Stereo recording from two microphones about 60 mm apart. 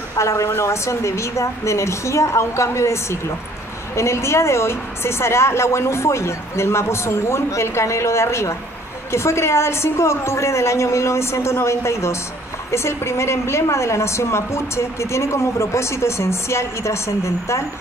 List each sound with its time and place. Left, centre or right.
0.2 s a woman's voice: left